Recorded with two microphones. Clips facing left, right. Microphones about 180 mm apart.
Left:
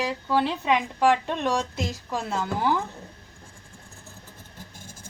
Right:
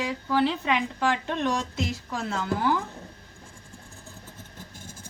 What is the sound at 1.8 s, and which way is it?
Speech, 20° left (ahead or behind).